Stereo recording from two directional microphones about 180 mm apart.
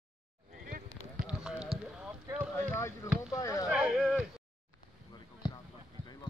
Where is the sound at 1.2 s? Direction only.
5° right (ahead or behind).